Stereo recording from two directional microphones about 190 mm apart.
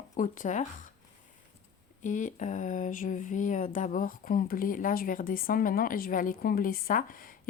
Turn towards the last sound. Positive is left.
turn(degrees=45)  # may be behind; listen again after turning